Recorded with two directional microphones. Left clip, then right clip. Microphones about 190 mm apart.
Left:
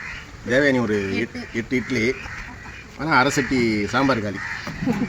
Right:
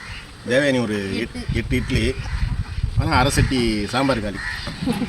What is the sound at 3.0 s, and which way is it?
A man's voice, 15° right (ahead or behind).